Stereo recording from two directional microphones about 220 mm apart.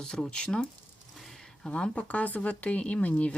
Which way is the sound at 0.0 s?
5° left (ahead or behind).